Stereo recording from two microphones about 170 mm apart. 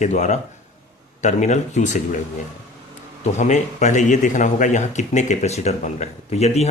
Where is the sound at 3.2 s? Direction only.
45° left (ahead or behind).